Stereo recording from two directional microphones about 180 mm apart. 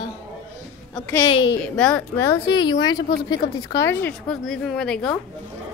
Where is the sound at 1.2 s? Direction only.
25° left (ahead or behind).